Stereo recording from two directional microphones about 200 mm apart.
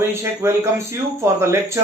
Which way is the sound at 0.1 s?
15° right (ahead or behind).